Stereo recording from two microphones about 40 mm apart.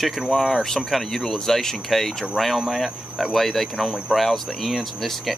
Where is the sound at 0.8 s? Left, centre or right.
Centre.